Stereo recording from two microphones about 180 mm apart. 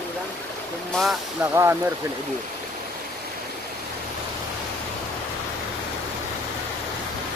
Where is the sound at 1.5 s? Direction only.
15° right (ahead or behind).